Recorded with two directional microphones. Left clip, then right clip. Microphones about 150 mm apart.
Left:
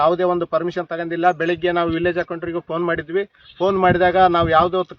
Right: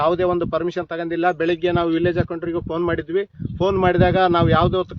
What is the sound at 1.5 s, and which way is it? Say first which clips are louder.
A man's voice: even; 90° right.